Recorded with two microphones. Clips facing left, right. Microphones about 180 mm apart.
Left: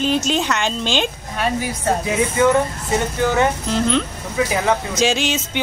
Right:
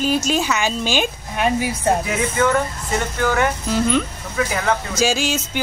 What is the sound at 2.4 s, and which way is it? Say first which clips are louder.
Speech: left 3 dB; 15° left (ahead or behind).